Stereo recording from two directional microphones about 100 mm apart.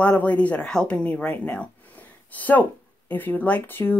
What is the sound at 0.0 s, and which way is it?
Speech, 15° left (ahead or behind).